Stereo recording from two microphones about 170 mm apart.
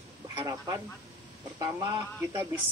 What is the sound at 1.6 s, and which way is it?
Speech, 20° right (ahead or behind).